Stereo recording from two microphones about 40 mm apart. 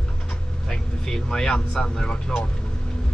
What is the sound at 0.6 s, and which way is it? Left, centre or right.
Speech, centre.